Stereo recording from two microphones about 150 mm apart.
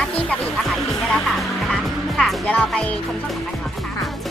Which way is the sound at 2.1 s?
5° left (ahead or behind).